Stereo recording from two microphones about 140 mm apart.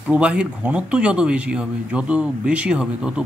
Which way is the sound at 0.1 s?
10° right (ahead or behind).